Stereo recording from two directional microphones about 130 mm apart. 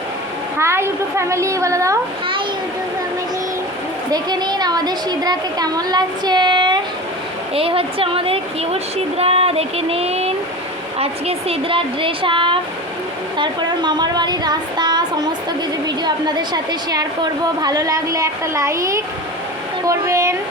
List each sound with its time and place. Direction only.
0.6 s a woman's voice: 20° right (ahead or behind)
4.1 s a woman's voice: 30° right (ahead or behind)
7.5 s a woman's voice: 45° right (ahead or behind); by 20.3 s 20° right (ahead or behind)